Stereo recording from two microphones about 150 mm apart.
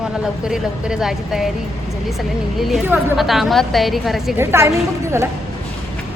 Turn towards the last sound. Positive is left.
turn(degrees=-20)  # may be behind; listen again after turning